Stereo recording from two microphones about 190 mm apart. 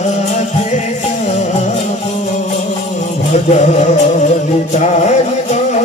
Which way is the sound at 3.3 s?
40° left (ahead or behind).